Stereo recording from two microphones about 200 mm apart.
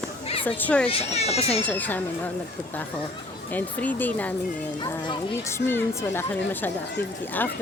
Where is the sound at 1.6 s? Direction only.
10° left (ahead or behind).